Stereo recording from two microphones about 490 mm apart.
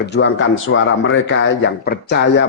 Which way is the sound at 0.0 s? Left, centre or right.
Left.